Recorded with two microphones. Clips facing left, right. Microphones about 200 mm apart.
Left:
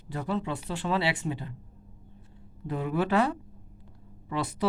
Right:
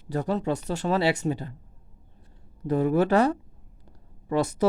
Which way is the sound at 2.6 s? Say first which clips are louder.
Right 7 dB; 45° right (ahead or behind).